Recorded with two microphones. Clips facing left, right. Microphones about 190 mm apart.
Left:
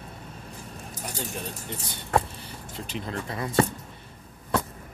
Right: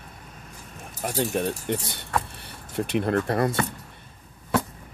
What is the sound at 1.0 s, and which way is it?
Speech, 60° right (ahead or behind).